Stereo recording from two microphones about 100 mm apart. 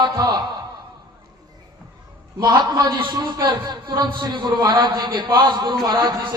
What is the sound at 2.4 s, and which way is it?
A man's voice, 45° right (ahead or behind).